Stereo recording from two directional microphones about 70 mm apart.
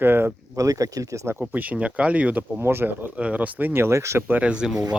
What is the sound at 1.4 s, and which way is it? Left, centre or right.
Speech, right.